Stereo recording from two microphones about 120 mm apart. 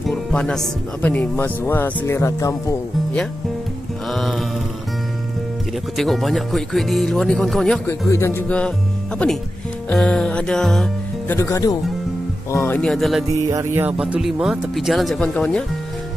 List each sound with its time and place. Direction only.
0.1 s speech: 10° left (ahead or behind); by 2.5 s 25° left (ahead or behind)
4.1 s mantra: centre (ahead or behind)
5.9 s speech: centre (ahead or behind)
8.1 s speech: 20° left (ahead or behind); by 10.9 s 5° left (ahead or behind)
11.2 s speech: 25° left (ahead or behind)
12.7 s speech: 5° left (ahead or behind)
13.5 s music: 20° right (ahead or behind)
13.9 s speech: 10° right (ahead or behind); by 15.6 s 10° left (ahead or behind)